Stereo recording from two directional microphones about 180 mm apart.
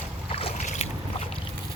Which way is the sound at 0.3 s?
30° left (ahead or behind).